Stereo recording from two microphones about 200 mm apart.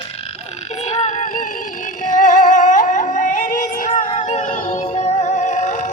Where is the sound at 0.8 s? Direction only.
35° left (ahead or behind).